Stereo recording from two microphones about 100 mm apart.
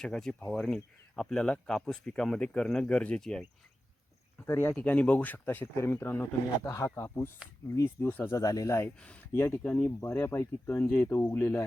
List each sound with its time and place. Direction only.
0.0 s speech: 5° left (ahead or behind)
4.4 s speech: 25° left (ahead or behind)
8.4 s speech: 35° left (ahead or behind); by 11.6 s 20° left (ahead or behind)